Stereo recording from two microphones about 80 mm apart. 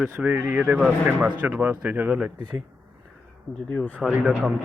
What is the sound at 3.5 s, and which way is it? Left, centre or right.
Speech, centre.